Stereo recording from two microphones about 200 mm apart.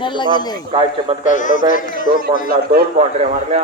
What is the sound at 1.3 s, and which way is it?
Speech, 40° left (ahead or behind).